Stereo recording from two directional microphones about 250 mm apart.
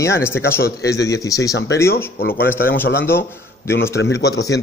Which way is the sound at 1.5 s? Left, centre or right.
Left.